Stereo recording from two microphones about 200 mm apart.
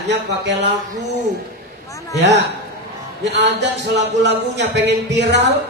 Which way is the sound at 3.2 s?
60° right (ahead or behind).